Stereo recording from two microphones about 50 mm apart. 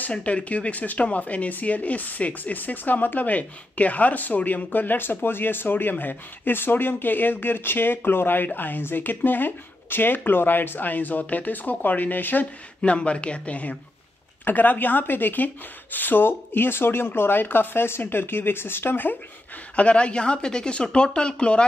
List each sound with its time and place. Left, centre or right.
0.1 s speech: left
12.8 s a woman's voice: left
19.7 s a woman's voice: left